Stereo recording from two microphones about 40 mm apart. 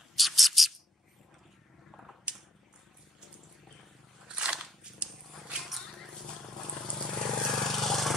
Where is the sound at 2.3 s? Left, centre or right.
Right.